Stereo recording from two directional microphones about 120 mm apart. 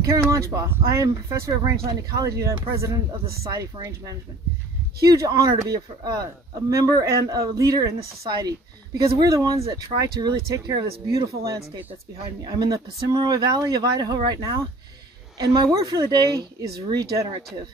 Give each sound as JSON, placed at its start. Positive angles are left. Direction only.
{"t": 0.0, "sound": "speech", "side_deg": -25}